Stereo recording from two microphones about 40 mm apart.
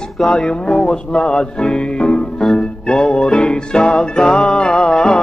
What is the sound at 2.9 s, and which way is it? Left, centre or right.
Music, centre.